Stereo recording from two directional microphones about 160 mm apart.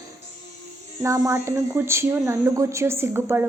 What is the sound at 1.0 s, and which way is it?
A woman's voice, 20° right (ahead or behind).